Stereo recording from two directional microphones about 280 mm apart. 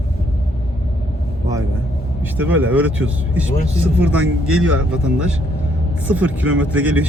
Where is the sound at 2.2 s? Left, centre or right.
Centre.